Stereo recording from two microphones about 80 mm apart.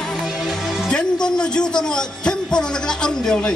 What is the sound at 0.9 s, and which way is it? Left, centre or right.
Speech, centre.